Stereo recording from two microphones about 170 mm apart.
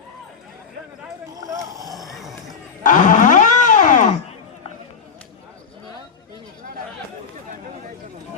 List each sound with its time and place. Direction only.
1.3 s vehicle: 20° right (ahead or behind)
2.0 s a sound: centre (ahead or behind)
2.8 s wild animals: 50° left (ahead or behind)